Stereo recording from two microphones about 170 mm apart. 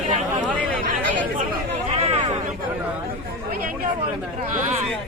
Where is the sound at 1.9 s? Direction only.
40° right (ahead or behind).